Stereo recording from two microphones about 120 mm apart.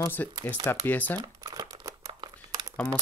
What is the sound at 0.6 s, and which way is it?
Speech, 15° left (ahead or behind).